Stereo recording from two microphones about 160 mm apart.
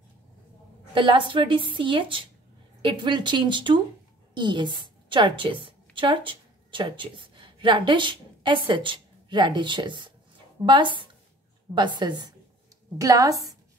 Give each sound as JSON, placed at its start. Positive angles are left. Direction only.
{"t": 0.9, "sound": "a woman's voice", "side_deg": -30}